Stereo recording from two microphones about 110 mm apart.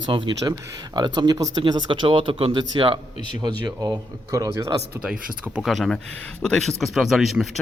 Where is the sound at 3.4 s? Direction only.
35° right (ahead or behind).